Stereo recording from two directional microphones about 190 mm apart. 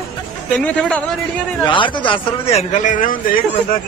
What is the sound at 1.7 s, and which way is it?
A man's voice, 25° left (ahead or behind).